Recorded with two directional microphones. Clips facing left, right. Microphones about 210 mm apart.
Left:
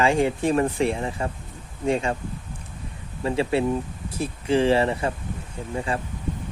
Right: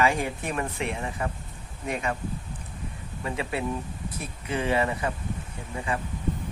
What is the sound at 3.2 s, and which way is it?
Speech, 30° left (ahead or behind).